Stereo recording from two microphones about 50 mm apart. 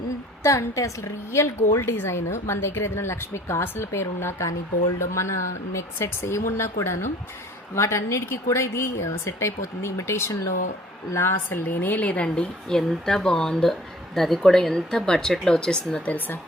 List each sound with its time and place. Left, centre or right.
0.4 s a woman's voice: left
7.8 s a woman's voice: left
11.5 s speech: left
12.7 s speech: centre
16.0 s speech: left